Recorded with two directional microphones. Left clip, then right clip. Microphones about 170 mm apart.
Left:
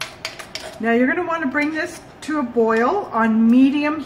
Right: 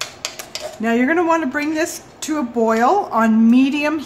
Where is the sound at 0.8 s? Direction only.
50° right (ahead or behind).